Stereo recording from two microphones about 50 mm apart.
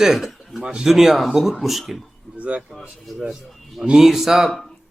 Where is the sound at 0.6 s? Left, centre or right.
Centre.